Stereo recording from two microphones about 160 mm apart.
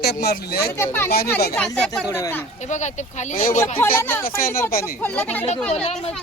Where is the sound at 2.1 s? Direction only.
20° left (ahead or behind).